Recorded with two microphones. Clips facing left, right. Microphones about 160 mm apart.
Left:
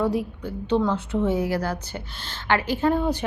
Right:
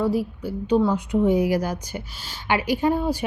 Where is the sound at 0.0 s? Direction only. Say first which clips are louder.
Right 1 dB; centre (ahead or behind).